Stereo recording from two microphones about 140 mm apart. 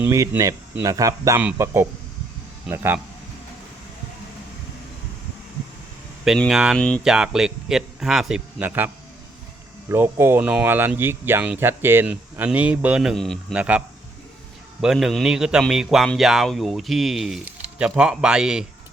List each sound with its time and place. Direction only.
0.0 s speech: 20° right (ahead or behind)
6.2 s a man's voice: centre (ahead or behind)
6.7 s speech: 5° left (ahead or behind)
7.0 s a man's voice: 5° right (ahead or behind)
9.9 s speech: 15° right (ahead or behind); by 13.4 s 5° left (ahead or behind)
13.5 s a man's voice: 10° right (ahead or behind)